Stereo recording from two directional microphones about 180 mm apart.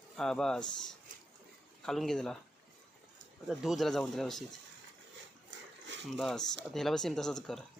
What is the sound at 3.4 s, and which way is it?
Speech, centre (ahead or behind).